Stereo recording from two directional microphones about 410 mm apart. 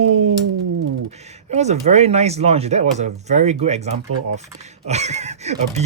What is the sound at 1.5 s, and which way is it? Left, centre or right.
Speech, centre.